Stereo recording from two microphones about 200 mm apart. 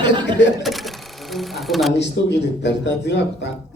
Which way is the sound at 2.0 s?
60° left (ahead or behind).